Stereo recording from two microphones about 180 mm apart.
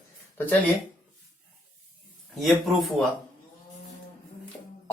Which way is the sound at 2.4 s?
Centre (ahead or behind).